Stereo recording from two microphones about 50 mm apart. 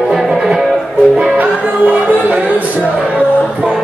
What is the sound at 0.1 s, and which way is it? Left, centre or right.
Music, centre.